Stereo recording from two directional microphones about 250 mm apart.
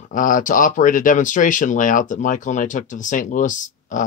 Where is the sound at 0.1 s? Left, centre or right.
Left.